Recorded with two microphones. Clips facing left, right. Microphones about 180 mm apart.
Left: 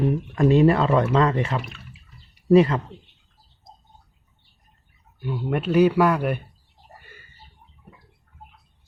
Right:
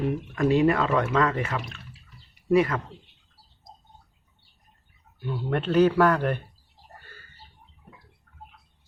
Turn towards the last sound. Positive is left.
turn(degrees=15)  # may be behind; listen again after turning